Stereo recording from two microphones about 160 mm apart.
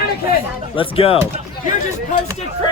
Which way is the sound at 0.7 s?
35° left (ahead or behind).